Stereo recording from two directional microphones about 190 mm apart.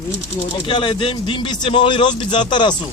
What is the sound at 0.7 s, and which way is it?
Speech, 25° left (ahead or behind).